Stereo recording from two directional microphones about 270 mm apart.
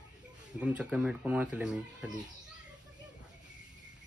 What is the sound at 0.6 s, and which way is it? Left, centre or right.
Speech, centre.